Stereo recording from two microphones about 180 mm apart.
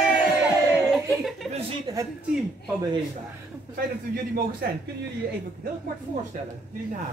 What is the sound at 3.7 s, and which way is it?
Speech, 55° right (ahead or behind).